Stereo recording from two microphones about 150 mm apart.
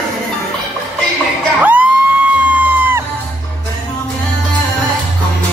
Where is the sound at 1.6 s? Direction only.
10° right (ahead or behind).